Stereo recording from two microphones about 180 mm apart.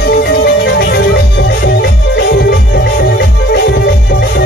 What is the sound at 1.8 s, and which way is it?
Music, 65° left (ahead or behind).